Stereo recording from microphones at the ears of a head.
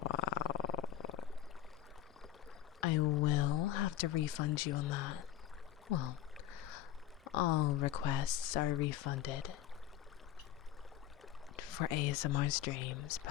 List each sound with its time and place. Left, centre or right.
0.0 s purr: left
2.8 s a sound: left
5.9 s rowboat: left
7.3 s speech: left
11.5 s speech: left